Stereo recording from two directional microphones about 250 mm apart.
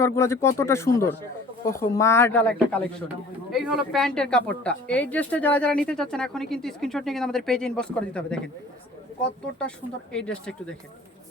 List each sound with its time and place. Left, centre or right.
0.0 s speech: centre
9.6 s speech: centre